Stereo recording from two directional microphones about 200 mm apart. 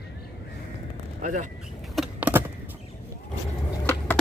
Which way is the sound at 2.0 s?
5° right (ahead or behind).